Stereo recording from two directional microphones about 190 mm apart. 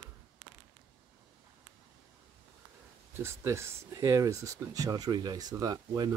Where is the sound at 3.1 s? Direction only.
15° right (ahead or behind).